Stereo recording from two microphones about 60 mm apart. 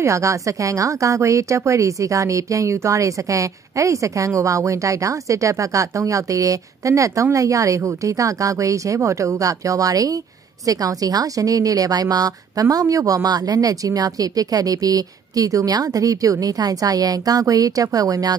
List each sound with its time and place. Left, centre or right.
0.0 s a woman's voice: right